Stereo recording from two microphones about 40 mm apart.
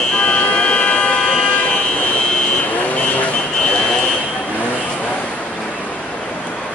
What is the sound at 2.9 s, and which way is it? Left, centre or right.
Vehicle, left.